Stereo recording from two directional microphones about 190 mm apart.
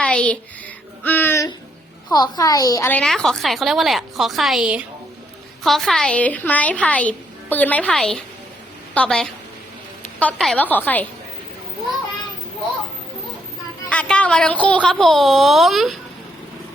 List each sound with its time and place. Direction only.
0.0 s a sound: 5° left (ahead or behind)
2.0 s a woman's voice: 20° left (ahead or behind)
3.0 s a woman's voice: centre (ahead or behind)
13.9 s speech: 5° left (ahead or behind)